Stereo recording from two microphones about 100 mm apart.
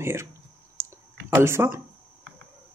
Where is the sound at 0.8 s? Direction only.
30° right (ahead or behind).